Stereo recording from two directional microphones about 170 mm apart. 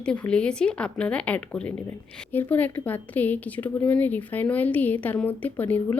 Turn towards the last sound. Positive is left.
turn(degrees=10)  # may be behind; listen again after turning